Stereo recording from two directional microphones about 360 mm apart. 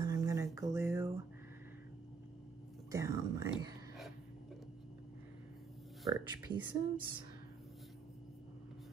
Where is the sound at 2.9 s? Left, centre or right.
Centre.